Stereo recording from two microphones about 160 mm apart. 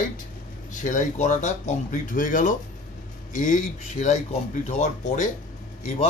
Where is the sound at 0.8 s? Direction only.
50° left (ahead or behind).